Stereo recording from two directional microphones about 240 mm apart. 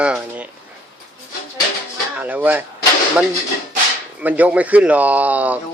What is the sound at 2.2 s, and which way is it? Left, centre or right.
Speech, centre.